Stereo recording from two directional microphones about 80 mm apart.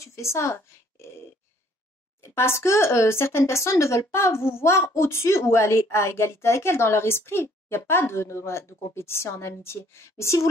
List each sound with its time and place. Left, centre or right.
0.0 s speech: left
2.2 s speech: left